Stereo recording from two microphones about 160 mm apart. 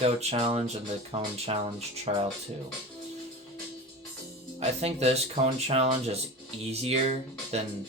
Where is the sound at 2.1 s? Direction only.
45° right (ahead or behind).